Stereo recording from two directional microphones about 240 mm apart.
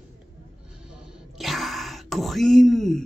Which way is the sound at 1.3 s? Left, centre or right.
Centre.